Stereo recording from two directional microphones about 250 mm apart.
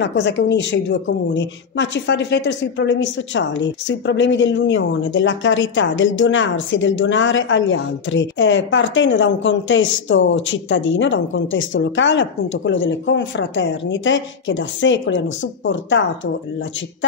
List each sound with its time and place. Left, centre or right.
0.0 s a woman's voice: left